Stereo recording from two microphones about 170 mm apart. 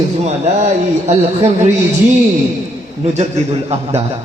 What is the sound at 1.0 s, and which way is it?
Speech, 40° right (ahead or behind).